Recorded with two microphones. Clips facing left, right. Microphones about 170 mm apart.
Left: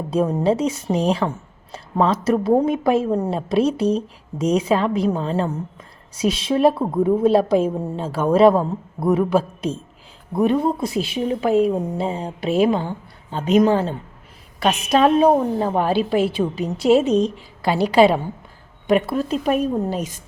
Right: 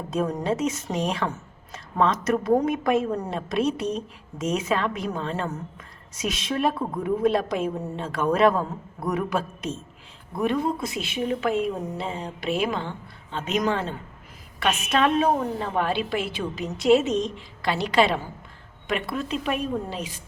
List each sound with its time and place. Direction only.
0.1 s a woman's voice: 30° left (ahead or behind)
17.2 s a woman's voice: 5° left (ahead or behind)
18.9 s a woman's voice: 35° left (ahead or behind)